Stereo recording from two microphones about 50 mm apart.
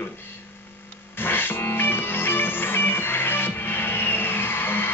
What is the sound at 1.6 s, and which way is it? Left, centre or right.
Music, left.